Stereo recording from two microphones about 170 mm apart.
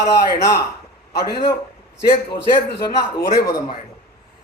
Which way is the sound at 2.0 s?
70° left (ahead or behind).